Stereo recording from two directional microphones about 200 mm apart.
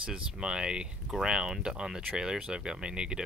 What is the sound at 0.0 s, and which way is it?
Speech, 5° right (ahead or behind).